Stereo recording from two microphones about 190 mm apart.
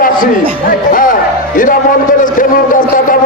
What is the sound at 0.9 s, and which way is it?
Music, 45° left (ahead or behind).